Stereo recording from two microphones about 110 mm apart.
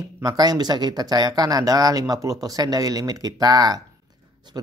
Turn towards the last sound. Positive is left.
turn(degrees=-35)  # may be behind; listen again after turning